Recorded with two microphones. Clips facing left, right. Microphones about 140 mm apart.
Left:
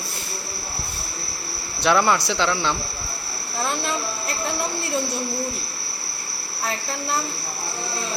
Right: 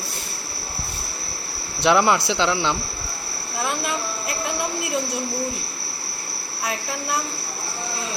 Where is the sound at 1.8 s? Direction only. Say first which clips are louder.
Right 1 dB; 20° right (ahead or behind).